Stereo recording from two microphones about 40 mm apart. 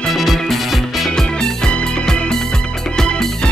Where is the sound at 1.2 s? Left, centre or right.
Left.